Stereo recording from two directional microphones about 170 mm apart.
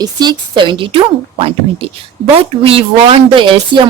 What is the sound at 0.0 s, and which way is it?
A woman's voice, 25° right (ahead or behind).